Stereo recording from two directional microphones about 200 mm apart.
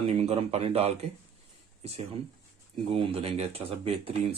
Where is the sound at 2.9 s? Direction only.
30° right (ahead or behind).